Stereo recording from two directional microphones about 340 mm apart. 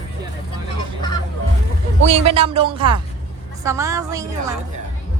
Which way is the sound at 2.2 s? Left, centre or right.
Centre.